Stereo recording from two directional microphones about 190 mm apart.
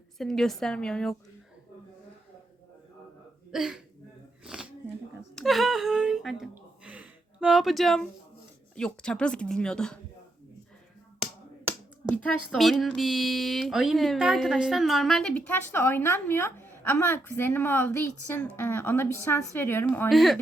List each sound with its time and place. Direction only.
0.2 s speech: centre (ahead or behind)
3.5 s speech: 5° right (ahead or behind)
4.4 s a sound: 5° right (ahead or behind)
5.3 s speech: centre (ahead or behind)
6.4 s a sound: 5° right (ahead or behind)
8.7 s speech: 5° left (ahead or behind)
12.0 s a woman's voice: 5° left (ahead or behind)
20.1 s speech: centre (ahead or behind)